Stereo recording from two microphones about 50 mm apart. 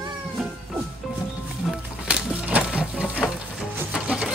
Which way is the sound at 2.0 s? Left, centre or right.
Right.